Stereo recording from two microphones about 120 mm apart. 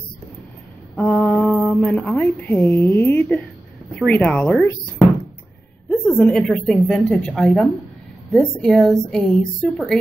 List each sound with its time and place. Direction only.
0.9 s mantra: 10° left (ahead or behind)
2.0 s a woman's voice: 15° left (ahead or behind)
5.9 s a woman's voice: 10° left (ahead or behind)